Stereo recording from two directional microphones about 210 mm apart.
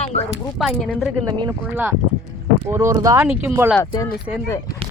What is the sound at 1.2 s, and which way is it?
Speech, 20° right (ahead or behind).